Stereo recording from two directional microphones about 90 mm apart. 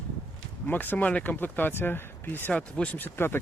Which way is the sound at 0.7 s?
20° left (ahead or behind).